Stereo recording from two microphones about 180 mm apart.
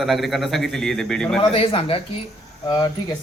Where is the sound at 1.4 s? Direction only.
30° left (ahead or behind).